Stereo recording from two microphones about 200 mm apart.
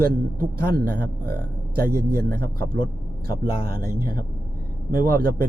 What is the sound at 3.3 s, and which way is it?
Speech, 45° right (ahead or behind).